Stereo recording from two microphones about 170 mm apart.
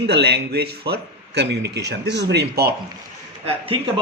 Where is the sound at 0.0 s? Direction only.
75° right (ahead or behind).